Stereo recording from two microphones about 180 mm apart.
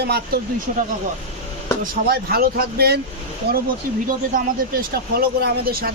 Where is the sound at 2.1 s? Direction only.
55° right (ahead or behind).